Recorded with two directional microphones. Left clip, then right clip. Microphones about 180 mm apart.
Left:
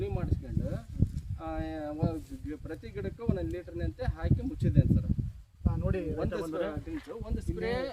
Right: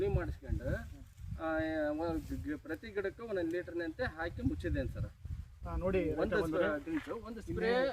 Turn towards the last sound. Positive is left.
turn(degrees=20)  # may be behind; listen again after turning